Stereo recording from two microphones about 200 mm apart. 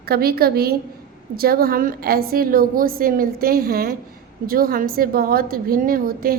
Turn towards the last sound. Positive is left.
turn(degrees=-45)  # may be behind; listen again after turning